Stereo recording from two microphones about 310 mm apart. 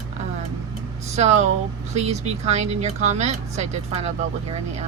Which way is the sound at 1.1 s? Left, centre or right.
Right.